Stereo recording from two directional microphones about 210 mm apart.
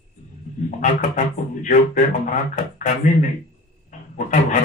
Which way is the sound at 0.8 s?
35° left (ahead or behind).